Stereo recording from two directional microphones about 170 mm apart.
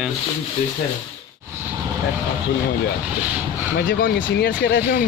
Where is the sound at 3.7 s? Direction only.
60° left (ahead or behind).